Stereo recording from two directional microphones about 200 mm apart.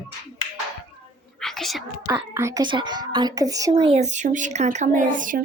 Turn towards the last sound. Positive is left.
turn(degrees=-40)  # may be behind; listen again after turning